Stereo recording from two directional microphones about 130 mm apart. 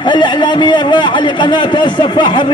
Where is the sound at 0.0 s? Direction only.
35° left (ahead or behind).